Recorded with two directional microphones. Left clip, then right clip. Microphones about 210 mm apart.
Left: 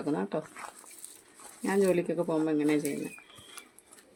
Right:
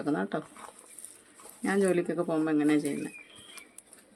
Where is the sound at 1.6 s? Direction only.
15° right (ahead or behind).